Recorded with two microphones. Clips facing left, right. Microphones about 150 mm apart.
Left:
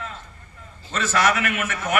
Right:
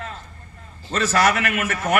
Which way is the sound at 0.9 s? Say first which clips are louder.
Right 2 dB; 45° right (ahead or behind).